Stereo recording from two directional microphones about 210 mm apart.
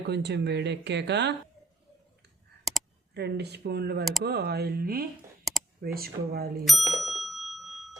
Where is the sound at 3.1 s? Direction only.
50° right (ahead or behind).